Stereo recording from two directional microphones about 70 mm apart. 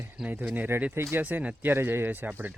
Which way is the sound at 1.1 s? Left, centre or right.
Right.